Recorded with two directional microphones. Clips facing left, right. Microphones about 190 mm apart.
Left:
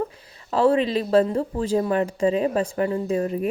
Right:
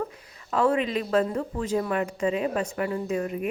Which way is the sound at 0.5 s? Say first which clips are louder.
Left 4 dB; 30° left (ahead or behind).